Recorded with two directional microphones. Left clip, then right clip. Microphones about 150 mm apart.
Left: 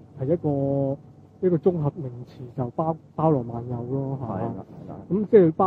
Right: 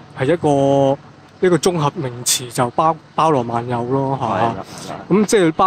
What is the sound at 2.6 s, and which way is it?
Speech, 75° right (ahead or behind).